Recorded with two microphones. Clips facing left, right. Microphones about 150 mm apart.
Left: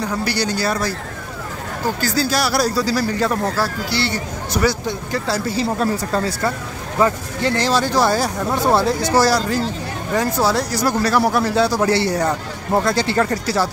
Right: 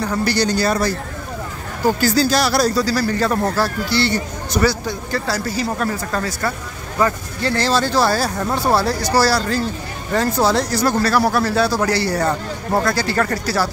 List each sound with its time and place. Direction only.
0.2 s speech: 5° left (ahead or behind)
2.1 s speech: 5° left (ahead or behind)
3.3 s speech: 15° right (ahead or behind)
3.9 s speech: 5° left (ahead or behind)
4.6 s speech: 20° left (ahead or behind)
7.0 s speech: 15° left (ahead or behind)